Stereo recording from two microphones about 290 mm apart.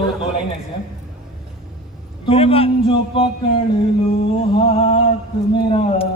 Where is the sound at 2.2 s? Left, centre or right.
Centre.